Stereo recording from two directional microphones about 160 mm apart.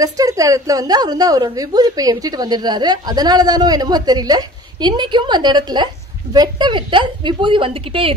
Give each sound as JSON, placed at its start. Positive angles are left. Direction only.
{"t": 0.0, "sound": "a woman's voice", "side_deg": -20}